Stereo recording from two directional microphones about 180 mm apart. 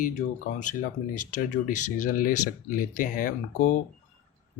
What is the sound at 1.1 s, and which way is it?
Speech, 45° left (ahead or behind).